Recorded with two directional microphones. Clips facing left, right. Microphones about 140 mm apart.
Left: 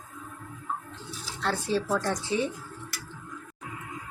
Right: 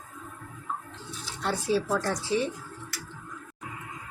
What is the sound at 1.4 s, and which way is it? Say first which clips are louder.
Speech: right 1 dB; 10° right (ahead or behind).